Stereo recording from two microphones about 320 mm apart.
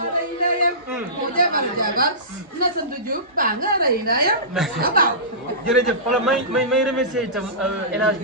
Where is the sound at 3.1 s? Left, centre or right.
Right.